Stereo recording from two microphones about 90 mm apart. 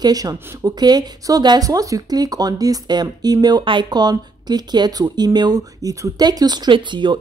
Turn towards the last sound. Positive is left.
turn(degrees=-60)  # may be behind; listen again after turning